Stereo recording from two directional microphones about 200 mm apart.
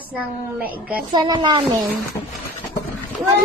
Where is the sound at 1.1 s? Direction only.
20° right (ahead or behind).